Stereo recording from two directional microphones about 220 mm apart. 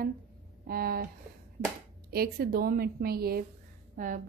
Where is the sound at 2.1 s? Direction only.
45° right (ahead or behind).